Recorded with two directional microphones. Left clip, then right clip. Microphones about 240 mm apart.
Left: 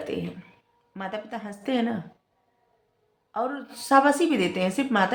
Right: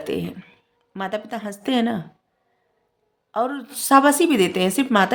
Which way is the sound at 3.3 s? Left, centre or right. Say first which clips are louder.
Right 5 dB; right.